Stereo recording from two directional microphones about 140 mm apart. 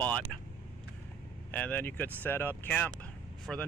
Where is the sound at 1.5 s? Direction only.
10° left (ahead or behind).